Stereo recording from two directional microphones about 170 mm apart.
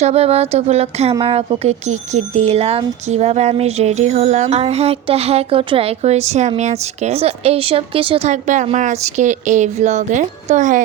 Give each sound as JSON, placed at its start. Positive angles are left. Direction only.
{"t": 0.0, "sound": "a woman's voice", "side_deg": -35}